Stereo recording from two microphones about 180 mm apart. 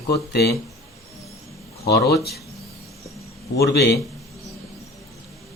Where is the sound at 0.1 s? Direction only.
65° left (ahead or behind).